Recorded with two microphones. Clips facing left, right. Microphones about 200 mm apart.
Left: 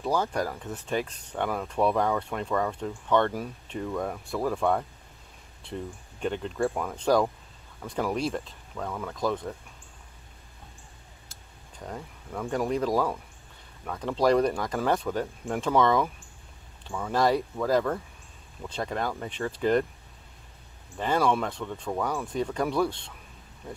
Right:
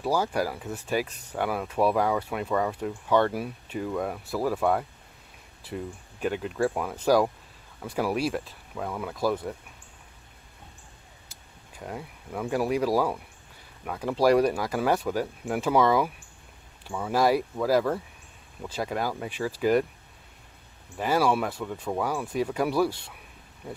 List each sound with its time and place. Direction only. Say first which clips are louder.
0.0 s speech: right 1 dB; 10° right (ahead or behind)
11.7 s speech: right 1 dB; 5° right (ahead or behind)
21.0 s speech: right 1 dB; 10° right (ahead or behind)